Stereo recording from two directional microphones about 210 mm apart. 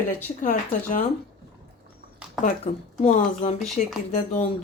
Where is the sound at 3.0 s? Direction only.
30° left (ahead or behind).